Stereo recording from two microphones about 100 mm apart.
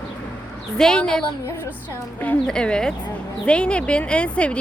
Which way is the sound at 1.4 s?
25° left (ahead or behind).